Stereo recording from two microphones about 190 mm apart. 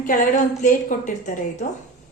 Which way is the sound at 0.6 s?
40° left (ahead or behind).